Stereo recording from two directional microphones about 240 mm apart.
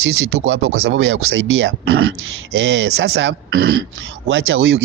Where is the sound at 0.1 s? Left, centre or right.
Right.